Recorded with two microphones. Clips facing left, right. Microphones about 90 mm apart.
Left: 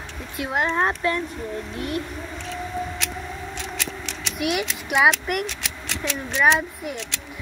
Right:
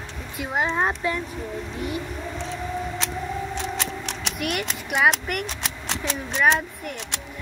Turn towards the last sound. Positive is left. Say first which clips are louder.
# left 2 dB
turn(degrees=5)  # may be behind; listen again after turning